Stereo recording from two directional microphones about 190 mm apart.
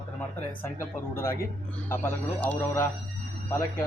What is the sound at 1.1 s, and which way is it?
Speech, 15° left (ahead or behind).